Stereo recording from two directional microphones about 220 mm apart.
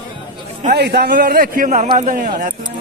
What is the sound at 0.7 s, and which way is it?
A man's voice, 45° right (ahead or behind).